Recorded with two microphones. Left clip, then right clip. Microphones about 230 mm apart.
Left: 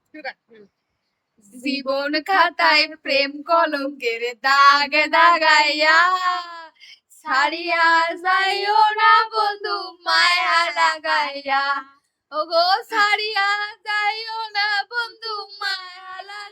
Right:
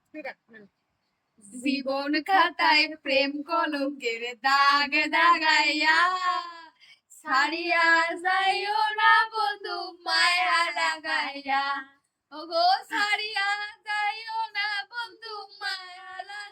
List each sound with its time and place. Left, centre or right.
0.1 s speech: centre
1.6 s child singing: centre